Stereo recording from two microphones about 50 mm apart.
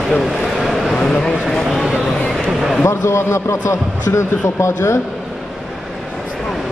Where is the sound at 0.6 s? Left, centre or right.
Centre.